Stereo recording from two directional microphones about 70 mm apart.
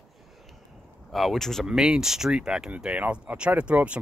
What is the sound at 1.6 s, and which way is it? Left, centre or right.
Speech, centre.